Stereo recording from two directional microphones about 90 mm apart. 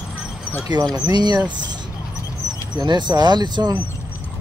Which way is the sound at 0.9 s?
50° right (ahead or behind).